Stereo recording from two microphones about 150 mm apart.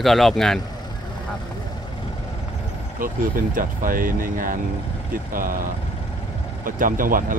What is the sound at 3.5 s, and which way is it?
Speech, 65° right (ahead or behind).